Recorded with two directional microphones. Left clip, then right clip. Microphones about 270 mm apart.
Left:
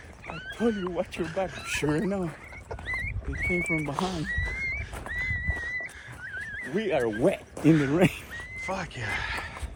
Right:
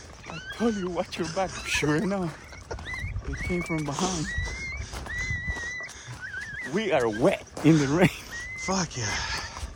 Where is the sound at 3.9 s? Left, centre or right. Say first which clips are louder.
Right 1 dB; right.